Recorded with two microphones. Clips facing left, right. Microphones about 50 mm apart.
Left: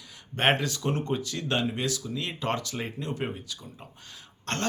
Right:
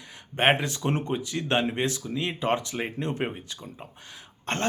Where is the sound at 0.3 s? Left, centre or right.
Right.